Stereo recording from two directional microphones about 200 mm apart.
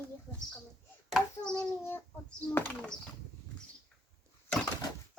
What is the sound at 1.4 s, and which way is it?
Child singing, 5° left (ahead or behind).